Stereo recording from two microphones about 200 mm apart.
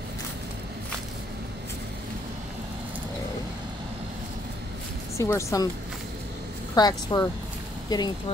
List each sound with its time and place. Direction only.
5.1 s speech: 15° left (ahead or behind)
6.7 s a woman's voice: 20° left (ahead or behind)